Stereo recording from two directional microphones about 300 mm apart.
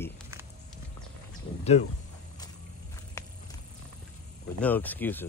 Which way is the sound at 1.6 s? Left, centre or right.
Left.